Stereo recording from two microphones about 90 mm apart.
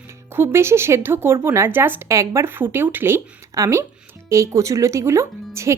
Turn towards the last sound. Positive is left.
turn(degrees=-30)  # may be behind; listen again after turning